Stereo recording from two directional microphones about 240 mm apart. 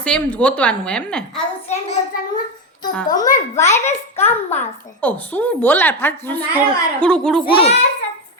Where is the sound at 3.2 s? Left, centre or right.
Left.